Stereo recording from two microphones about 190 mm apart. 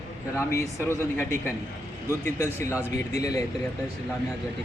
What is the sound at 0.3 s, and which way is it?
Speech, 15° left (ahead or behind).